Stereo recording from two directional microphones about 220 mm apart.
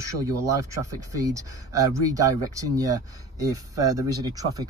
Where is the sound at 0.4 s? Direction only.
15° right (ahead or behind).